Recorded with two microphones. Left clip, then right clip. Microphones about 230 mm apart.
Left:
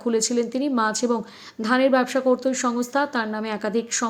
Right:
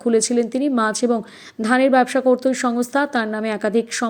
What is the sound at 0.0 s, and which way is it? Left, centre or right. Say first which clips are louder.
A woman's voice: right 5 dB; centre.